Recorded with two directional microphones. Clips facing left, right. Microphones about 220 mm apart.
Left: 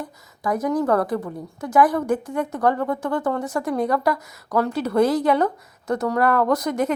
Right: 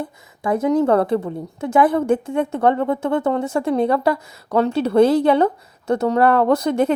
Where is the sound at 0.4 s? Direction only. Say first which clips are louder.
Right 4 dB; 25° right (ahead or behind).